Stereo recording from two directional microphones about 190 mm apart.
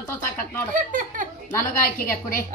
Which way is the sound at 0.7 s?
45° right (ahead or behind).